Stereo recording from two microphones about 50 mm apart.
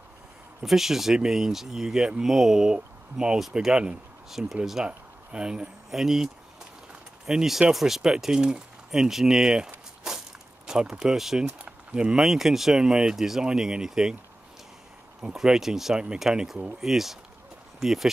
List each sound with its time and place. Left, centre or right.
0.7 s speech: centre
4.8 s speech: centre
10.7 s speech: centre
11.4 s a sound: right
12.2 s speech: centre
15.3 s speech: centre
16.3 s speech: centre
16.8 s speech: centre